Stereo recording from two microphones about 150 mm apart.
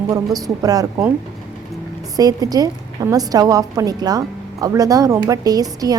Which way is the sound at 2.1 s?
25° right (ahead or behind).